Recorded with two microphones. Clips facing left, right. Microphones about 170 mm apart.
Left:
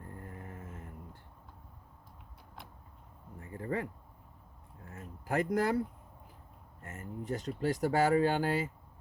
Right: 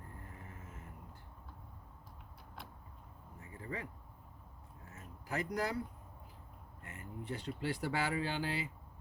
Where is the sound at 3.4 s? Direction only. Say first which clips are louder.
Left 9 dB; 55° left (ahead or behind).